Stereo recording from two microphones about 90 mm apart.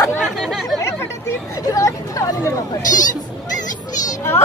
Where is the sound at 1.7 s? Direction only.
40° left (ahead or behind).